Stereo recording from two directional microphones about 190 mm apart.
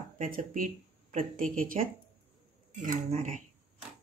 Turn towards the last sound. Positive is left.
turn(degrees=-40)  # may be behind; listen again after turning